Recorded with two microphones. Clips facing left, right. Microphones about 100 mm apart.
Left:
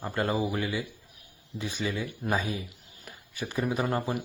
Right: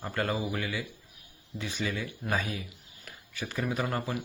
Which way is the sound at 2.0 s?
20° left (ahead or behind).